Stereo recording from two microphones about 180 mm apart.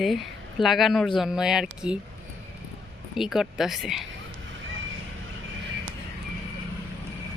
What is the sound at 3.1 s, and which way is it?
Speech, centre (ahead or behind).